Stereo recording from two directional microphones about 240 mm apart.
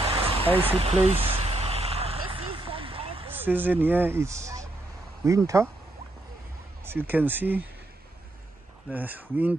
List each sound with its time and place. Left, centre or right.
0.0 s a sound: right
0.6 s vehicle: right
3.3 s speech: centre
6.8 s speech: centre
8.9 s speech: centre